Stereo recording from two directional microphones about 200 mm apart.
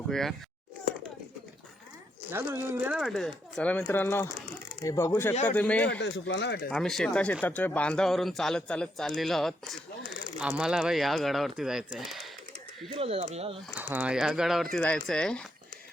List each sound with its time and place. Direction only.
0.1 s a man's voice: centre (ahead or behind)
2.3 s a man's voice: 10° right (ahead or behind); by 6.0 s 5° left (ahead or behind)
6.0 s speech: 60° left (ahead or behind)
6.7 s a man's voice: centre (ahead or behind)
13.0 s speech: 30° right (ahead or behind)
13.7 s a man's voice: 10° right (ahead or behind)